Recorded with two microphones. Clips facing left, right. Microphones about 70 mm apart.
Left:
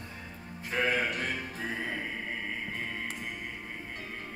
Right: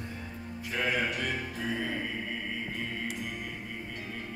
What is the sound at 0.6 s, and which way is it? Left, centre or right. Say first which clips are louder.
Music: left 1 dB; left.